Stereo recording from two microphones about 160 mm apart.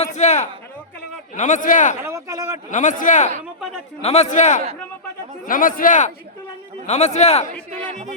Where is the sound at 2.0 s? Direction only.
20° right (ahead or behind).